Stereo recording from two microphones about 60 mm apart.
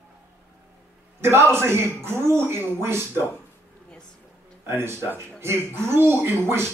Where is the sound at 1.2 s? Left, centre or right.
Right.